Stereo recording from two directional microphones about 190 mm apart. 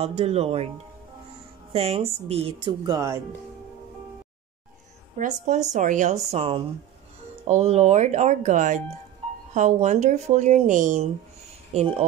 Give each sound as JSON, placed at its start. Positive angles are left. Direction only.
{"t": 0.0, "sound": "speech", "side_deg": -30}
{"t": 1.7, "sound": "speech", "side_deg": -30}
{"t": 5.1, "sound": "speech", "side_deg": -40}
{"t": 6.3, "sound": "speech", "side_deg": -30}